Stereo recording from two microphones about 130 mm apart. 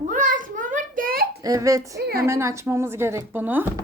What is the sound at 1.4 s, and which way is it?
A woman's voice, 25° right (ahead or behind).